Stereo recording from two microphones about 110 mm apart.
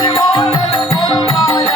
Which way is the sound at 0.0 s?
40° left (ahead or behind).